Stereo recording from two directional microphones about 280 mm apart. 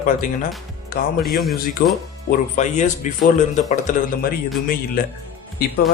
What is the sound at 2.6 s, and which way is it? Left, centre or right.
A man's voice, left.